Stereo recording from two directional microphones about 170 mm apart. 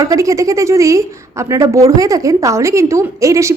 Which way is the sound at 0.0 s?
20° right (ahead or behind).